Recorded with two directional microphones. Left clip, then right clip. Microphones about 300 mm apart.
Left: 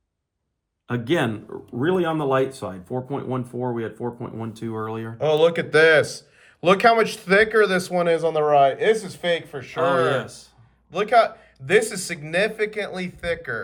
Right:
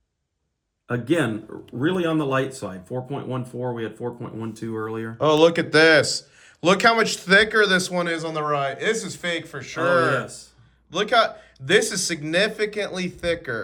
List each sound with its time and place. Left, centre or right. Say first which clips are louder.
1.8 s speech: left 1 dB; centre
4.7 s speech: even; left
5.1 s a man's voice: right 2 dB; centre